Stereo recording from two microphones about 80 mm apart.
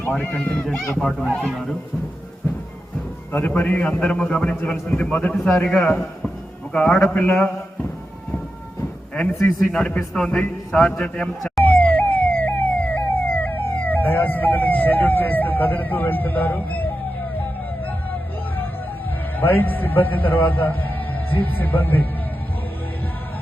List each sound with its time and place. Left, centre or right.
0.1 s a man's voice: centre
3.3 s a man's voice: left
9.1 s a man's voice: centre
11.6 s emergency vehicle: left
19.4 s a man's voice: left